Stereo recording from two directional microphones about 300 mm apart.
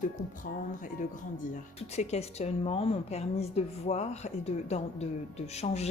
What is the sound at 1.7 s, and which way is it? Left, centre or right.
A woman's voice, left.